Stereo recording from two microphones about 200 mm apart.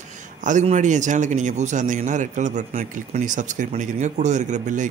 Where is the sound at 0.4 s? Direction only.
40° right (ahead or behind).